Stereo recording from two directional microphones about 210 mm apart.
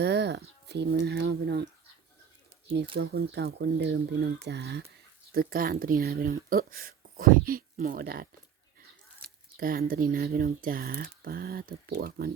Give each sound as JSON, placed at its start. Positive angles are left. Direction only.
{"t": 0.0, "sound": "speech", "side_deg": -55}
{"t": 2.9, "sound": "speech", "side_deg": -55}
{"t": 9.2, "sound": "a sound", "side_deg": -45}
{"t": 10.1, "sound": "speech", "side_deg": -45}